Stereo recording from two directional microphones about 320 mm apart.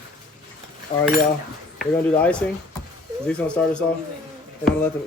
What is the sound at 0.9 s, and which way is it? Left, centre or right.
Cutlery, left.